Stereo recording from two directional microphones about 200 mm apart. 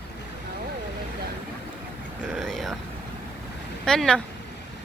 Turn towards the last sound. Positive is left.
turn(degrees=5)  # may be behind; listen again after turning